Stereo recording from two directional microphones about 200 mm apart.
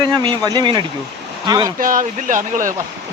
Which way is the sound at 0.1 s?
20° right (ahead or behind).